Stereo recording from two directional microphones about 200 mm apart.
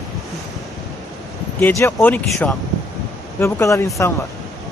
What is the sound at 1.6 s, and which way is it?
Speech, 10° left (ahead or behind).